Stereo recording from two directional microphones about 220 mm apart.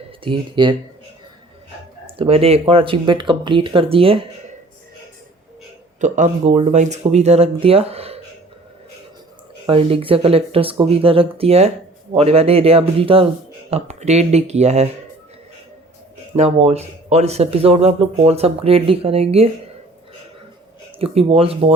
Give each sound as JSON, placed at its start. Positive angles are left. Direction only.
{"t": 0.2, "sound": "speech", "side_deg": -20}
{"t": 2.0, "sound": "speech", "side_deg": -25}
{"t": 6.0, "sound": "speech", "side_deg": -35}
{"t": 9.6, "sound": "speech", "side_deg": -25}
{"t": 16.3, "sound": "speech", "side_deg": -30}
{"t": 21.0, "sound": "speech", "side_deg": -25}